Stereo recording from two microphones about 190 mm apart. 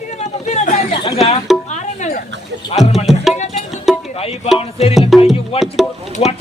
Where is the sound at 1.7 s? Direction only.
40° left (ahead or behind).